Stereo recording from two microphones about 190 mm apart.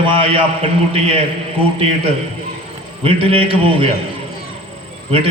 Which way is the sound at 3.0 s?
30° right (ahead or behind).